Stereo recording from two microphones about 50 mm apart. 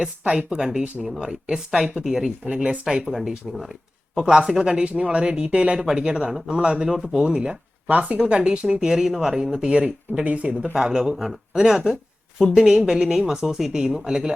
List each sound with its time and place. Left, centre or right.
0.0 s speech: centre
2.5 s speech: right
3.2 s speech: centre
4.2 s speech: centre
10.2 s speech: right
10.8 s speech: centre